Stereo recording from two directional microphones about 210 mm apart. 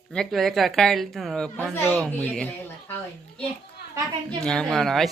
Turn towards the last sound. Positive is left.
turn(degrees=0)  # may be behind; listen again after turning